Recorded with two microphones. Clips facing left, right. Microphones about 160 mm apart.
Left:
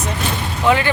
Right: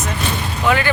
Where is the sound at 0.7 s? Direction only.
25° left (ahead or behind).